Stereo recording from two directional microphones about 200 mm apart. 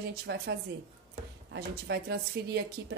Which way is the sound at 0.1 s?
55° right (ahead or behind).